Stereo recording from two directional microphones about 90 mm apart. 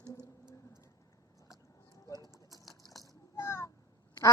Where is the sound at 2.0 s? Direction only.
45° left (ahead or behind).